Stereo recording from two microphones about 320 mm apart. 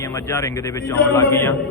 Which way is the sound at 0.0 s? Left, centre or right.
Centre.